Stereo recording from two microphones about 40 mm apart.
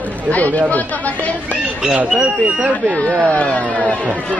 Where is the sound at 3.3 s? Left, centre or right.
Left.